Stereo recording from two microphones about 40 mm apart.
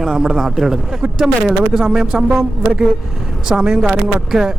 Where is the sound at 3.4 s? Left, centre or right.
Centre.